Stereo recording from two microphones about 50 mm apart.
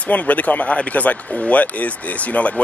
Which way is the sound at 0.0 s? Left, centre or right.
Left.